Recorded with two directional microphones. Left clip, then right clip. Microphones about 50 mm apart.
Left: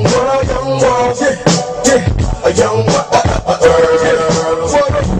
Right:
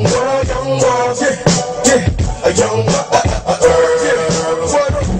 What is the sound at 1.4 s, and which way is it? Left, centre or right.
Music, centre.